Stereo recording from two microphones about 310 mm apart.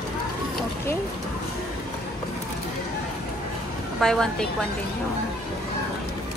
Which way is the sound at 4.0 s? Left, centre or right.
Centre.